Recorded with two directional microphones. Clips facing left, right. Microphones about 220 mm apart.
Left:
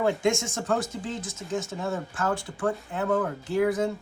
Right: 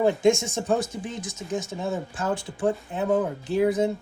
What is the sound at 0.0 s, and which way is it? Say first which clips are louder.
Speech: right 4 dB; 20° right (ahead or behind).